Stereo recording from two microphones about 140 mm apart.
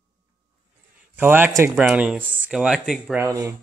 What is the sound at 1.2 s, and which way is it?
Speech, 15° right (ahead or behind).